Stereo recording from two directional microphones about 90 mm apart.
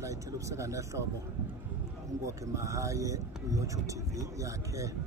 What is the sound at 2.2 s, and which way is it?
A man's voice, 35° right (ahead or behind).